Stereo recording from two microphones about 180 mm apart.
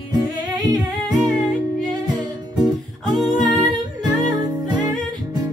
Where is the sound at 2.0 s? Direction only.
25° right (ahead or behind).